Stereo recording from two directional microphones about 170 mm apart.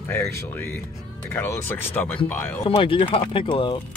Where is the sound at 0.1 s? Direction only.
15° left (ahead or behind).